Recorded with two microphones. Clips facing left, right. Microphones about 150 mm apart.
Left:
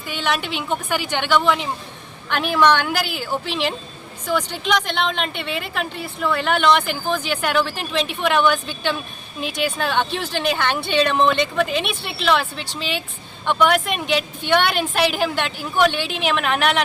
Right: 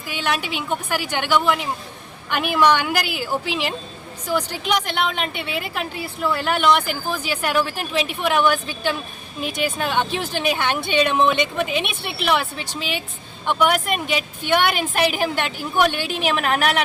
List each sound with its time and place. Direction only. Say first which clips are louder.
0.1 s a woman's voice: left 1 dB; 5° right (ahead or behind)
15.9 s a woman's voice: even; 45° right (ahead or behind)